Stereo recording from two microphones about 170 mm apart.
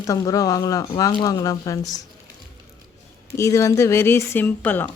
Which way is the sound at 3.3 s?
15° left (ahead or behind).